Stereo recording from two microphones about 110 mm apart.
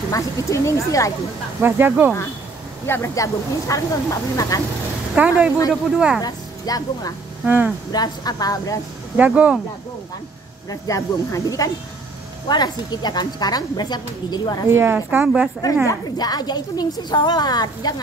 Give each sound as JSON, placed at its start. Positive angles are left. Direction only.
{"t": 0.1, "sound": "speech", "side_deg": 30}
{"t": 1.6, "sound": "speech", "side_deg": -20}
{"t": 2.9, "sound": "speech", "side_deg": 25}
{"t": 5.1, "sound": "speech", "side_deg": -10}
{"t": 6.2, "sound": "a woman's voice", "side_deg": 35}
{"t": 7.4, "sound": "speech", "side_deg": -15}
{"t": 7.9, "sound": "a woman's voice", "side_deg": 40}
{"t": 9.1, "sound": "speech", "side_deg": -15}
{"t": 10.7, "sound": "a woman's voice", "side_deg": 30}
{"t": 14.7, "sound": "a woman's voice", "side_deg": -20}
{"t": 15.2, "sound": "speech", "side_deg": -5}
{"t": 15.9, "sound": "a woman's voice", "side_deg": 35}